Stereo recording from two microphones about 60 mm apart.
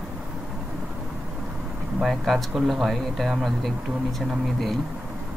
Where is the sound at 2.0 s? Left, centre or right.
Centre.